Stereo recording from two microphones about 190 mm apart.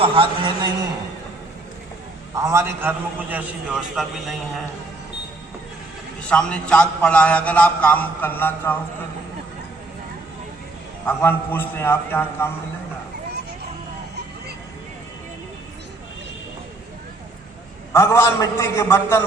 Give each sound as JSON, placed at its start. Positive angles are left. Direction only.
{"t": 0.0, "sound": "a man's voice", "side_deg": -25}
{"t": 2.3, "sound": "a man's voice", "side_deg": -15}
{"t": 6.2, "sound": "a man's voice", "side_deg": 5}
{"t": 11.0, "sound": "a man's voice", "side_deg": 10}
{"t": 17.9, "sound": "a man's voice", "side_deg": 15}